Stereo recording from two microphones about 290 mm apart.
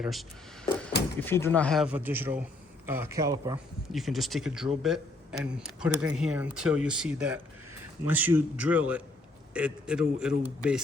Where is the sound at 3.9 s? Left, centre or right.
Centre.